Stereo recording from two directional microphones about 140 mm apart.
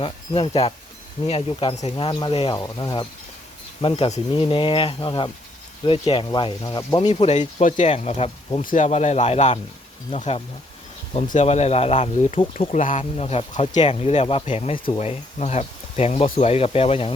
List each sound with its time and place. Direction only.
0.0 s speech: 40° left (ahead or behind)
2.6 s speech: 25° left (ahead or behind)
7.2 s speech: 55° left (ahead or behind)
8.6 s speech: 60° left (ahead or behind)
13.5 s speech: 60° left (ahead or behind)
13.8 s speech: 45° left (ahead or behind)